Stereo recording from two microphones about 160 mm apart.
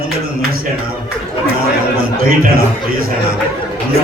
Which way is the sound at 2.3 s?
65° right (ahead or behind).